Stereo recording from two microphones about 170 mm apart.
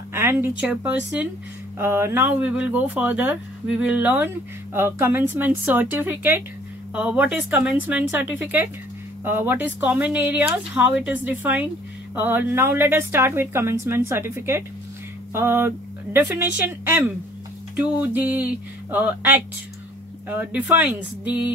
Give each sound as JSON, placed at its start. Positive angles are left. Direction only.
{"t": 0.1, "sound": "speech", "side_deg": -15}